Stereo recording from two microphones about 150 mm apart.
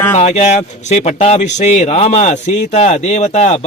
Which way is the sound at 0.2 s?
50° left (ahead or behind).